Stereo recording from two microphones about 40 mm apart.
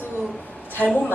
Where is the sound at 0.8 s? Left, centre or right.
Left.